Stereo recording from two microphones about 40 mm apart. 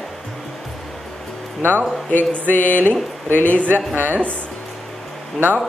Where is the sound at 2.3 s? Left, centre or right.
Left.